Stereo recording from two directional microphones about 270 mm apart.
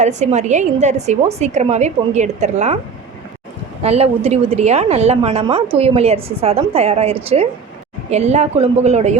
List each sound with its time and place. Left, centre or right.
0.0 s a woman's voice: right
3.8 s a woman's voice: right